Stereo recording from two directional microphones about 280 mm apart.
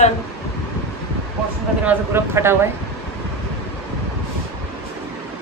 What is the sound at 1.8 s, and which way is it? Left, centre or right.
Speech, centre.